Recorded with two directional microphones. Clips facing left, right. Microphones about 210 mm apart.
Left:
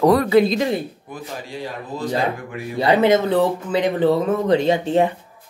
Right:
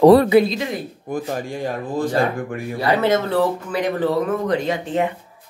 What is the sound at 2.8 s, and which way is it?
Speech, 20° left (ahead or behind).